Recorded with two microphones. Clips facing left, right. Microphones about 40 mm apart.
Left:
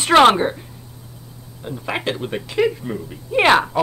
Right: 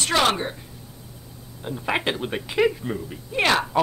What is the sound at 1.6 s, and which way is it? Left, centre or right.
Speech, centre.